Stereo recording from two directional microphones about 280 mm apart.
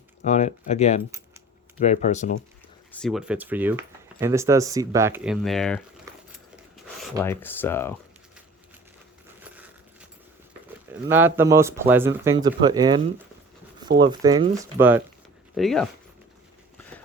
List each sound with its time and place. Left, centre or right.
0.3 s speech: left
2.9 s speech: centre
6.1 s a sound: centre
7.0 s speech: centre
9.4 s a sound: centre
11.1 s speech: centre
14.0 s speech: centre